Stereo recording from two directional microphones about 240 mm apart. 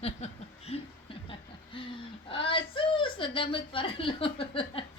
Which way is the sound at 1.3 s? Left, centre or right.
Left.